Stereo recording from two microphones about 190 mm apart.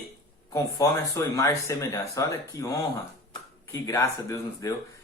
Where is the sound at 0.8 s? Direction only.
20° left (ahead or behind).